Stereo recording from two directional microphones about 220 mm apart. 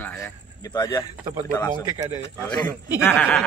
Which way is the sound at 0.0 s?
10° left (ahead or behind).